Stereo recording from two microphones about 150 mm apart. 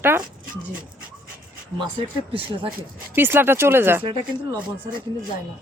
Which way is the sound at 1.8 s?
35° right (ahead or behind).